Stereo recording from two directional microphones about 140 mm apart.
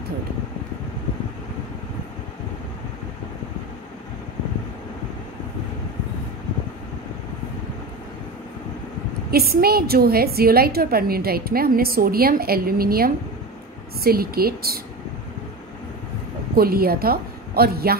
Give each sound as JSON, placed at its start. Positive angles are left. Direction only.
{"t": 9.3, "sound": "a woman's voice", "side_deg": -90}
{"t": 16.5, "sound": "a woman's voice", "side_deg": -90}